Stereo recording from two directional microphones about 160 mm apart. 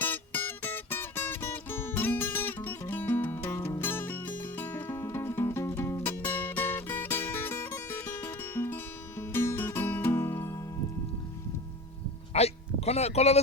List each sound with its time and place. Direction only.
0.0 s music: 15° left (ahead or behind)
12.3 s speech: 40° left (ahead or behind)